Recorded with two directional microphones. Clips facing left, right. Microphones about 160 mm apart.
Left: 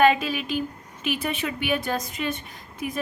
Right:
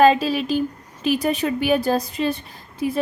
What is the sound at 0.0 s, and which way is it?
A woman's voice, 35° right (ahead or behind).